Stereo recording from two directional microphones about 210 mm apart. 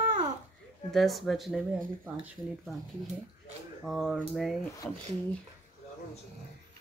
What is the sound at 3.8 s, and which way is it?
Speech, centre (ahead or behind).